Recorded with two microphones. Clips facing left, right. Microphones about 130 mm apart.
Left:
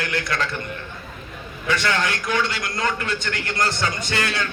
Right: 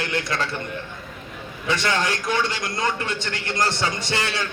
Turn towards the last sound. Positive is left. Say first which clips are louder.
# left 1 dB
turn(degrees=-25)  # may be behind; listen again after turning